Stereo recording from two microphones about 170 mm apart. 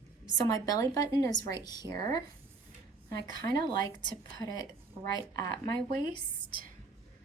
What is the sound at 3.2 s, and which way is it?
A woman's voice, 25° left (ahead or behind).